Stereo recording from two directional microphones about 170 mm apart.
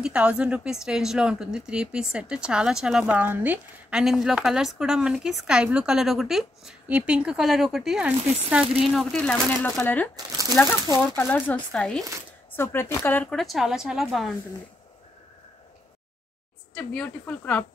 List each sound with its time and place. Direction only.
0.0 s speech: 5° right (ahead or behind)
10.1 s speech: 20° right (ahead or behind)
10.5 s speech: 15° left (ahead or behind); by 14.3 s centre (ahead or behind)
16.7 s speech: 5° left (ahead or behind)